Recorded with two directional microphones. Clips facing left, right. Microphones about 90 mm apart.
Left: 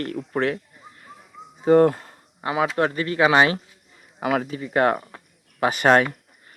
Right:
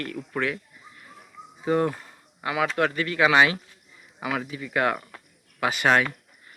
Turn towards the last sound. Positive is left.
turn(degrees=40)  # may be behind; listen again after turning